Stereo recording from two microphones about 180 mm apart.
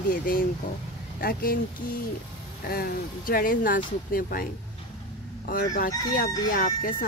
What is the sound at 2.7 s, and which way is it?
Speech, 55° left (ahead or behind).